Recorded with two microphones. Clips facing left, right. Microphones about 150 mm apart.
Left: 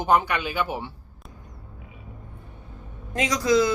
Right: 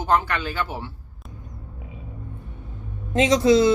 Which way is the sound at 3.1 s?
25° right (ahead or behind).